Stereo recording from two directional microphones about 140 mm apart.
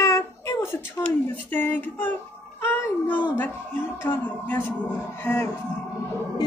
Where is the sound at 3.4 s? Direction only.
15° left (ahead or behind).